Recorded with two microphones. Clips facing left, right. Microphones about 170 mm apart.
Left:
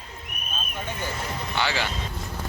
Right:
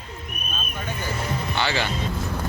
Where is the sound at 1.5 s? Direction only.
10° left (ahead or behind).